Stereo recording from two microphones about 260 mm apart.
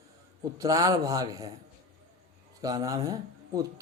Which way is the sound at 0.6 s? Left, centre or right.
Centre.